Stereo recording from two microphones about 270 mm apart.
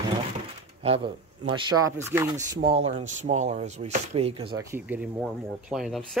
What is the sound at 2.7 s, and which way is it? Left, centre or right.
Speech, right.